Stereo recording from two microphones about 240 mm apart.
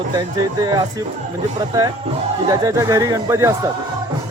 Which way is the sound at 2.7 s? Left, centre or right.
Centre.